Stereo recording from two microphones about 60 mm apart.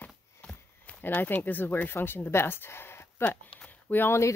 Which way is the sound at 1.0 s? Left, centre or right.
Left.